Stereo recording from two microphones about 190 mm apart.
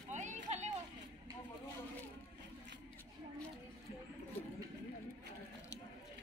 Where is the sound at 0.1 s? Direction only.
40° right (ahead or behind).